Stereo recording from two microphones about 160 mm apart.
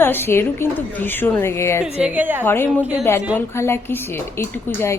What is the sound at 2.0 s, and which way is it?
Speech, 10° right (ahead or behind).